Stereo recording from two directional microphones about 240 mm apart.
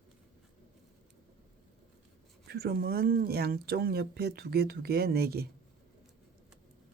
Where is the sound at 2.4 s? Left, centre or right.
Right.